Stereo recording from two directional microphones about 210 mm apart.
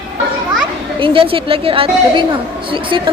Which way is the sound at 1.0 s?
25° right (ahead or behind).